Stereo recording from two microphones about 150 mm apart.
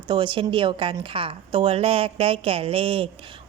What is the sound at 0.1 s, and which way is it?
A woman's voice, 35° right (ahead or behind).